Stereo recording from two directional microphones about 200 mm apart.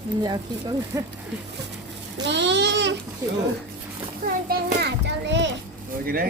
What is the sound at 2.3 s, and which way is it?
Speech, 60° right (ahead or behind).